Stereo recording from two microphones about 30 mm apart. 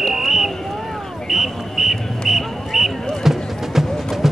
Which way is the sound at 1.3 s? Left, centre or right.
Centre.